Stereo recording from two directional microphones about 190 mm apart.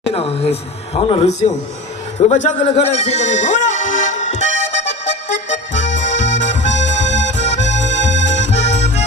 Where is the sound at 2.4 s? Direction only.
35° left (ahead or behind).